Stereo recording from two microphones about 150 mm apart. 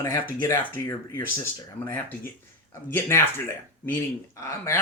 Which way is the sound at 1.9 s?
15° left (ahead or behind).